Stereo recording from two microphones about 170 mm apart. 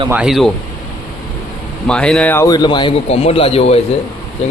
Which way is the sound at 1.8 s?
5° left (ahead or behind).